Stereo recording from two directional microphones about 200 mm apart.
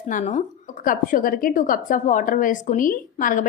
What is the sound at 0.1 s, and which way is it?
A woman's voice, 40° left (ahead or behind).